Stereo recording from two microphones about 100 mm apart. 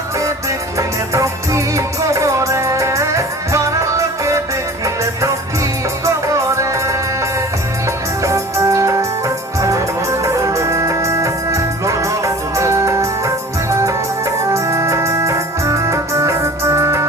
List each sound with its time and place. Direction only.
0.8 s music: 30° right (ahead or behind)
6.1 s music: 30° right (ahead or behind)
14.5 s organ: 30° right (ahead or behind)